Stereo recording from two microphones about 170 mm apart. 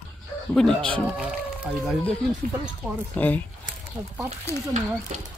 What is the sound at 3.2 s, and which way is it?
Speech, 10° left (ahead or behind).